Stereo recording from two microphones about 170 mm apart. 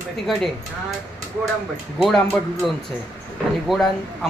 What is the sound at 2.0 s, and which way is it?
Speech, centre (ahead or behind).